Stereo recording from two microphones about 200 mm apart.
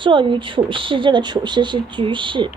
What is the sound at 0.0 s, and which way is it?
A woman's voice, 25° right (ahead or behind).